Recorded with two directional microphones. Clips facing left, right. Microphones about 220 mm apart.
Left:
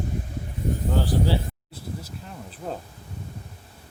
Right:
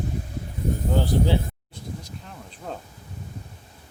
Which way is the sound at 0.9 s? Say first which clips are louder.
Right 2 dB; 20° right (ahead or behind).